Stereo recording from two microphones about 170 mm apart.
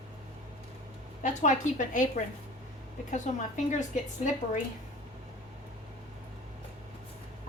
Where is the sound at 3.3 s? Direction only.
45° left (ahead or behind).